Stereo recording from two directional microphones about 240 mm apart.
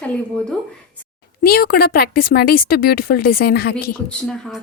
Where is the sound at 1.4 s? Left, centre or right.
Left.